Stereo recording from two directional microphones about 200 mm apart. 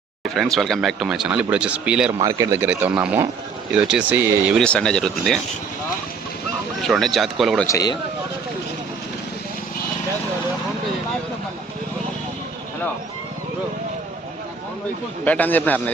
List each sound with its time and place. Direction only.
0.3 s speech: centre (ahead or behind)
4.6 s speech: 5° left (ahead or behind)
6.8 s speech: centre (ahead or behind)
7.7 s a man's voice: 20° left (ahead or behind)
15.2 s a man's voice: 10° left (ahead or behind)